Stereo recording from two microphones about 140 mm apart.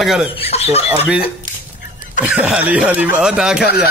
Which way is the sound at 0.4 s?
50° left (ahead or behind).